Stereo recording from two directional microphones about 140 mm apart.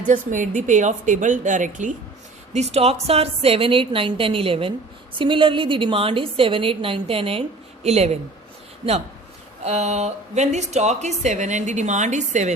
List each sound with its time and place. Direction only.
0.0 s speech: 70° right (ahead or behind)
2.5 s a woman's voice: 50° right (ahead or behind)
9.6 s speech: 55° right (ahead or behind)